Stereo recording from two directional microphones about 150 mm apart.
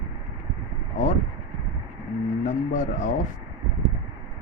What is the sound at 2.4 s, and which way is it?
Speech, 55° left (ahead or behind).